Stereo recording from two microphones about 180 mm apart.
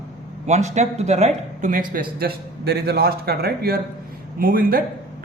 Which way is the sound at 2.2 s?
60° right (ahead or behind).